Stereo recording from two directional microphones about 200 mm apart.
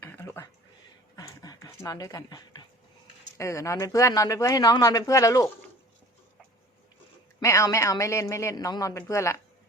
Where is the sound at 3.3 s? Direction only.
15° left (ahead or behind).